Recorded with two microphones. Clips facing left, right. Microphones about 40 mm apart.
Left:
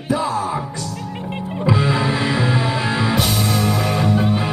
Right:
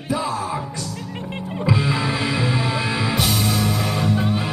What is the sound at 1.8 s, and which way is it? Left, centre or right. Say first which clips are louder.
Music: left 3 dB; centre.